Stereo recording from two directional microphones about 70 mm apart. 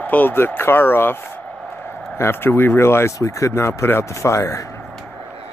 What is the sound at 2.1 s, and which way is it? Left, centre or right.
Speech, left.